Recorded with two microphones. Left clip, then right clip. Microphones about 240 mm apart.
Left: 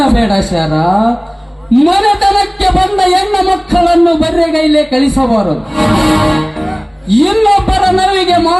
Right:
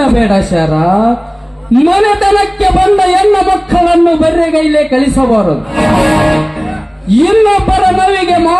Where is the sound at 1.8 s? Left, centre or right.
Left.